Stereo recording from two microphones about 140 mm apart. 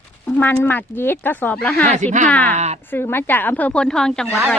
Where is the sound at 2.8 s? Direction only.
15° left (ahead or behind).